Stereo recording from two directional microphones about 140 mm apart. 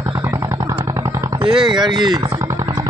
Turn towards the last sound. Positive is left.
turn(degrees=-30)  # may be behind; listen again after turning